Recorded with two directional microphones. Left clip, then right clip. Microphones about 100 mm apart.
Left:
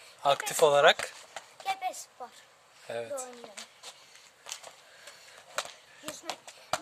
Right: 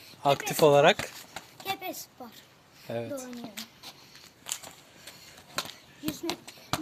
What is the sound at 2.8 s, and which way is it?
Speech, 50° left (ahead or behind).